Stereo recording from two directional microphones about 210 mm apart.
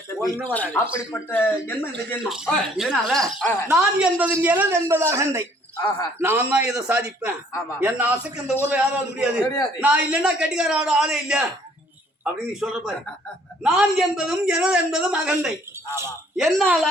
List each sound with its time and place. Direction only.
0.4 s speech: 5° left (ahead or behind)
2.1 s a man's voice: 5° right (ahead or behind)
3.8 s a man's voice: 5° right (ahead or behind)
9.4 s speech: 15° left (ahead or behind)
9.8 s a man's voice: 5° right (ahead or behind)
16.4 s a man's voice: centre (ahead or behind)